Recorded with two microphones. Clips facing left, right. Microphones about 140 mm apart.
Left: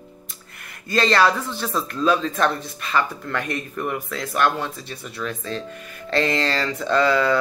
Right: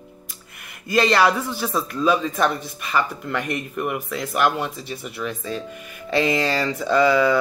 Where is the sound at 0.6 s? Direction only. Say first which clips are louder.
Right 2 dB; 5° right (ahead or behind).